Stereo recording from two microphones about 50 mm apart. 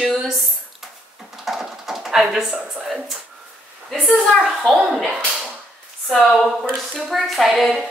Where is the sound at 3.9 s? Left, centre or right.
Centre.